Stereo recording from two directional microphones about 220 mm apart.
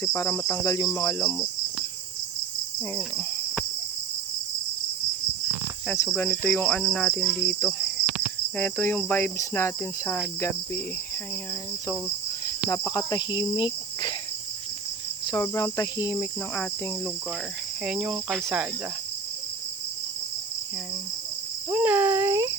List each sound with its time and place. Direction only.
0.0 s cricket: 10° left (ahead or behind)
2.9 s cricket: 5° left (ahead or behind)
5.9 s cricket: 10° left (ahead or behind)
12.7 s insect: 15° left (ahead or behind)
15.3 s cricket: 15° left (ahead or behind)
17.8 s cricket: centre (ahead or behind)
21.7 s speech: 5° right (ahead or behind)